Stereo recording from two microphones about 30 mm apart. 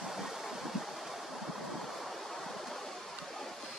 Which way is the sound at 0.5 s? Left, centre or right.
Centre.